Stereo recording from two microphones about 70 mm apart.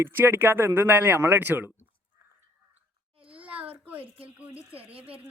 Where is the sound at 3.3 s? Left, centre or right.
Centre.